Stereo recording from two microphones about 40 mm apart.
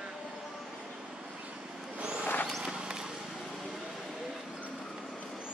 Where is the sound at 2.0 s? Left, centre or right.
Right.